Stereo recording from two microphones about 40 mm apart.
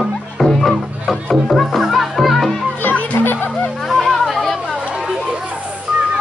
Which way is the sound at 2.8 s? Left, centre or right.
Left.